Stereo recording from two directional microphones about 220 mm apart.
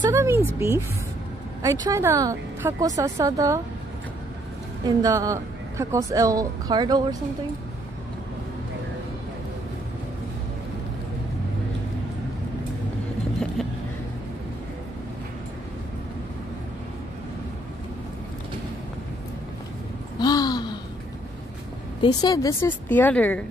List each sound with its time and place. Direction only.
0.0 s speech: 15° right (ahead or behind)
4.8 s speech: 15° right (ahead or behind)
20.2 s a sound: 20° left (ahead or behind)
22.0 s a woman's voice: 15° left (ahead or behind)